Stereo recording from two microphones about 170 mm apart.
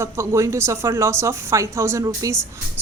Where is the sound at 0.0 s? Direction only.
15° right (ahead or behind).